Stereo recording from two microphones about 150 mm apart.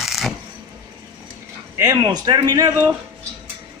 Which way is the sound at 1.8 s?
25° right (ahead or behind).